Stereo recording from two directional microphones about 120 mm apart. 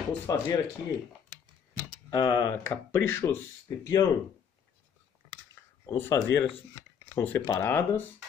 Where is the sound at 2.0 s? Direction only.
35° left (ahead or behind).